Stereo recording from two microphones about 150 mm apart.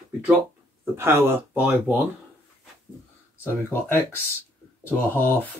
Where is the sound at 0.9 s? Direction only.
15° right (ahead or behind).